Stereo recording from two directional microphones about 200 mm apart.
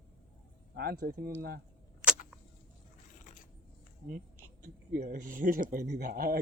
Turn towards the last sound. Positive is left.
turn(degrees=-45)  # may be behind; listen again after turning